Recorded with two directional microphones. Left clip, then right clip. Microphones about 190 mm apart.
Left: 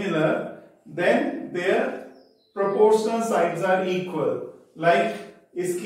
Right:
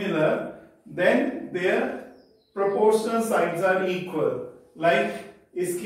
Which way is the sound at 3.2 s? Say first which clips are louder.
Left 1 dB; 15° right (ahead or behind).